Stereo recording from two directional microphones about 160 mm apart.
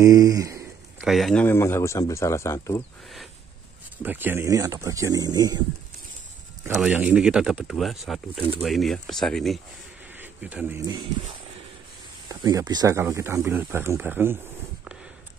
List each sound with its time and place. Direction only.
0.0 s speech: 20° right (ahead or behind)
1.0 s speech: centre (ahead or behind); by 2.8 s 20° left (ahead or behind)
4.0 s speech: 10° right (ahead or behind)
6.8 s speech: 5° right (ahead or behind)
10.1 s insect: 10° right (ahead or behind)
12.3 s speech: 25° right (ahead or behind)